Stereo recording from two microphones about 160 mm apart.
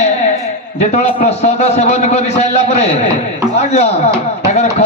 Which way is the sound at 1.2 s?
40° left (ahead or behind).